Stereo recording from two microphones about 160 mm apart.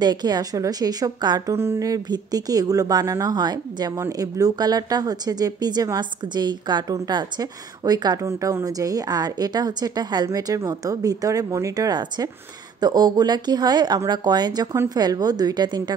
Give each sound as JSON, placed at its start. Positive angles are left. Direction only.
{"t": 0.0, "sound": "a woman's voice", "side_deg": -25}